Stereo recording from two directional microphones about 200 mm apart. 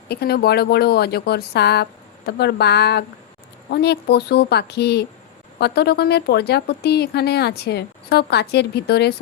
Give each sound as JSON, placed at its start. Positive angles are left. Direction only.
{"t": 0.1, "sound": "a woman's voice", "side_deg": 50}